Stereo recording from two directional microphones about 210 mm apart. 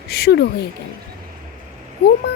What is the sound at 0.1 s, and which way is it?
Speech, 50° left (ahead or behind).